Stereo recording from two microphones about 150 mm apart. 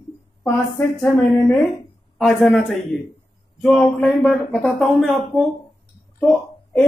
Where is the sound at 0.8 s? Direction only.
20° left (ahead or behind).